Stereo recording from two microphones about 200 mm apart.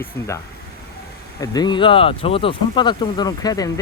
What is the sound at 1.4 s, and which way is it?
Speech, 20° left (ahead or behind).